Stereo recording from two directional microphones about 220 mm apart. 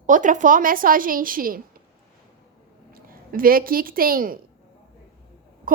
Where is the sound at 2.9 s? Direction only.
40° right (ahead or behind).